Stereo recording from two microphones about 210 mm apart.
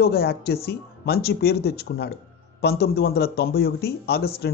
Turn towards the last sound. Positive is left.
turn(degrees=50)  # may be behind; listen again after turning